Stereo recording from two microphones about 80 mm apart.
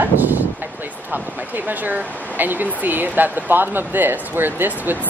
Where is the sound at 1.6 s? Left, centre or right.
Right.